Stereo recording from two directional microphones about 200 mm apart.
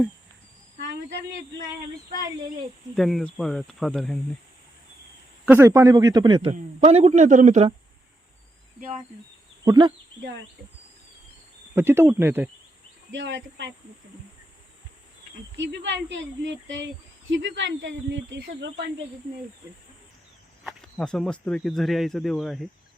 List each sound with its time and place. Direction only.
2.9 s speech: centre (ahead or behind)
5.5 s a man's voice: 15° right (ahead or behind); by 7.7 s 35° right (ahead or behind)
9.6 s speech: 20° right (ahead or behind)
11.7 s a man's voice: 10° right (ahead or behind)
13.1 s speech: 60° right (ahead or behind)
15.5 s speech: 60° right (ahead or behind)
20.7 s a sound: centre (ahead or behind)
21.4 s speech: centre (ahead or behind)